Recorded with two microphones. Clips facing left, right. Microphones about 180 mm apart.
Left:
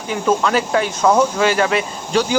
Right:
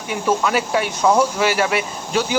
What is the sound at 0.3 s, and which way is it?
Speech, 10° right (ahead or behind).